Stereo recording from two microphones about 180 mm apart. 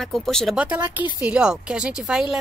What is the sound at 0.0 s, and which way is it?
A woman's voice, centre (ahead or behind).